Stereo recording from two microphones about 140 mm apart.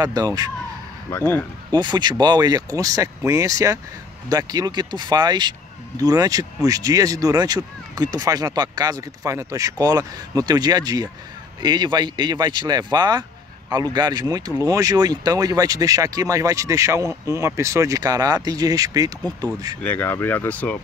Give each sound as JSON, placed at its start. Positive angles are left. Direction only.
{"t": 0.0, "sound": "speech", "side_deg": -25}
{"t": 1.1, "sound": "speech", "side_deg": 15}
{"t": 1.7, "sound": "speech", "side_deg": -30}
{"t": 19.8, "sound": "speech", "side_deg": 15}